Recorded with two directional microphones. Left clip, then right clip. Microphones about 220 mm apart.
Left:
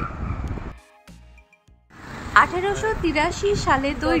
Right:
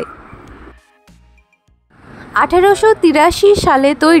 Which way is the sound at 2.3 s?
40° right (ahead or behind).